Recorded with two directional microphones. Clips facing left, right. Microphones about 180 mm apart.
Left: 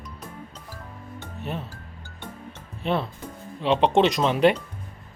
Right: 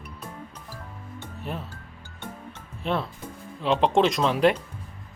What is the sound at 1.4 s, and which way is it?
Speech, centre (ahead or behind).